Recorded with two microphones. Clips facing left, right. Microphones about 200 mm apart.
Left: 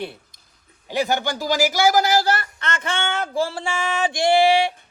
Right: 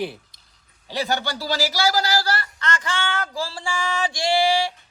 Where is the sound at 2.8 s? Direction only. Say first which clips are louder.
Left 2 dB; 20° left (ahead or behind).